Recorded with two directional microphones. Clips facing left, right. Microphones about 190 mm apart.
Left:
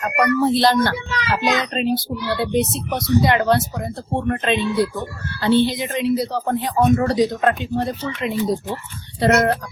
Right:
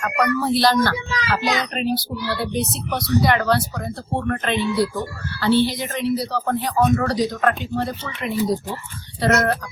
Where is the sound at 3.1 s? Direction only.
20° left (ahead or behind).